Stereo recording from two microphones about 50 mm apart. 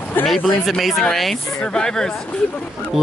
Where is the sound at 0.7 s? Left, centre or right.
Centre.